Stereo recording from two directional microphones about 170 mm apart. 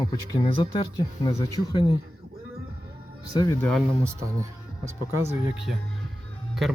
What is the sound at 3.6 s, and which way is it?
Speech, 5° left (ahead or behind).